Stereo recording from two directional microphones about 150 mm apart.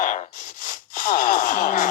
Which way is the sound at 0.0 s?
55° left (ahead or behind).